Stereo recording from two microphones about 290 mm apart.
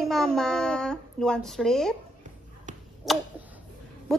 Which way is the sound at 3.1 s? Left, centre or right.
Centre.